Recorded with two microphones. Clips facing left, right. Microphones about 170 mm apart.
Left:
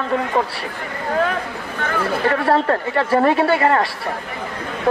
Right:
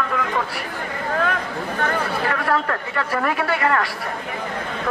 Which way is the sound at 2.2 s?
30° left (ahead or behind).